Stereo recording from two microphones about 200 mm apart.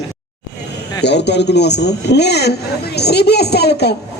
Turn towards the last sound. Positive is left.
turn(degrees=55)  # may be behind; listen again after turning